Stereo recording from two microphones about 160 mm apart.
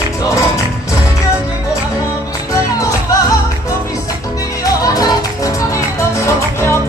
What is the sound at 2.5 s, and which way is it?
Music, 20° left (ahead or behind).